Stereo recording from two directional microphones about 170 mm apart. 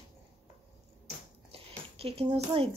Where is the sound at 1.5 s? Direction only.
35° right (ahead or behind).